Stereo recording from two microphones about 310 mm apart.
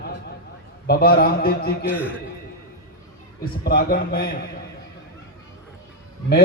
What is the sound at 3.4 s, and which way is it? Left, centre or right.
Speech, left.